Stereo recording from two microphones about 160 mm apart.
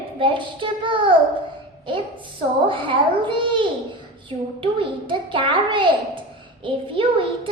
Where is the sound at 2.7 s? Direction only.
30° right (ahead or behind).